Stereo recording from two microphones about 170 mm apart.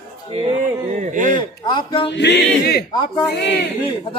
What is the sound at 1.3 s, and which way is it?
Speech, 25° left (ahead or behind).